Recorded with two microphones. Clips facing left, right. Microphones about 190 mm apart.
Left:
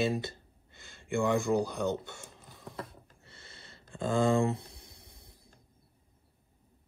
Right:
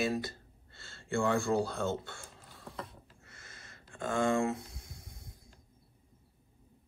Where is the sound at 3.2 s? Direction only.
30° left (ahead or behind).